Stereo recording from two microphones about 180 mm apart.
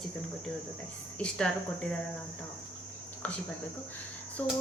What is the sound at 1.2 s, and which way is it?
Speech, 5° left (ahead or behind).